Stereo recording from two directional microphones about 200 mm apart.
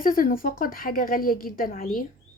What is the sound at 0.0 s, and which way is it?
A woman's voice, 45° left (ahead or behind).